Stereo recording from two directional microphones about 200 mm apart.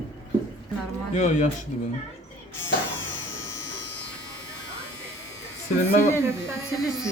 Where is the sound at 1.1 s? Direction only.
35° left (ahead or behind).